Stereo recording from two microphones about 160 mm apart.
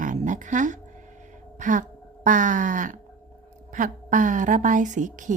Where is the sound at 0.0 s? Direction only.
55° right (ahead or behind).